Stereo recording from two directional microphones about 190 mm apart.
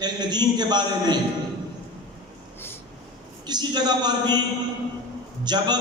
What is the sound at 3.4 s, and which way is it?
A man's voice, 20° right (ahead or behind).